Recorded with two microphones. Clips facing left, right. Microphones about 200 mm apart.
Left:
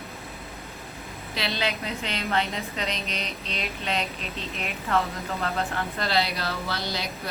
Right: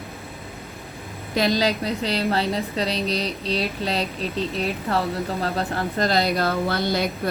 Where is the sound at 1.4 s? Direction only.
40° right (ahead or behind).